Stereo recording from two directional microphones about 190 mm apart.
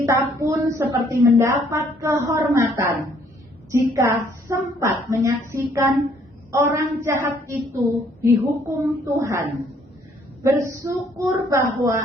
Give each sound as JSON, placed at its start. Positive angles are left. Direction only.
{"t": 0.1, "sound": "a woman's voice", "side_deg": -15}